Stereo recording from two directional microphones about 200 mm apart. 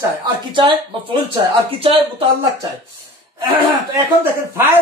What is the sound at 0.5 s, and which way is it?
Speech, 25° right (ahead or behind).